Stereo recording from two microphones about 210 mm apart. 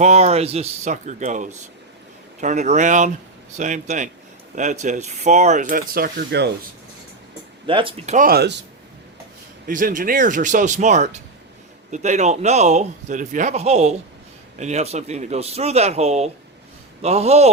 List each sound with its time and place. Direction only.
0.0 s a man's voice: 30° right (ahead or behind); by 6.5 s 50° right (ahead or behind)
7.7 s a man's voice: 25° right (ahead or behind); by 8.6 s 50° right (ahead or behind)
9.6 s a man's voice: 40° right (ahead or behind)